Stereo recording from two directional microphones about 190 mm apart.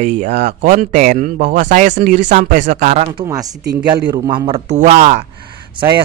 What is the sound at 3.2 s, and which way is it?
A man's voice, 20° right (ahead or behind).